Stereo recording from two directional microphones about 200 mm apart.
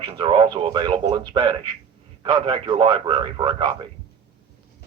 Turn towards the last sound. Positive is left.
turn(degrees=-25)  # may be behind; listen again after turning